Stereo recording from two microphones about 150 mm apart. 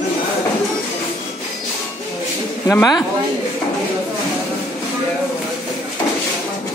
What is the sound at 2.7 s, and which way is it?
Speech, 25° left (ahead or behind).